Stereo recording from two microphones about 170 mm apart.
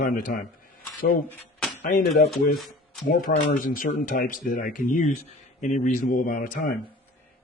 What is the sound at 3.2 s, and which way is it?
Speech, 55° left (ahead or behind).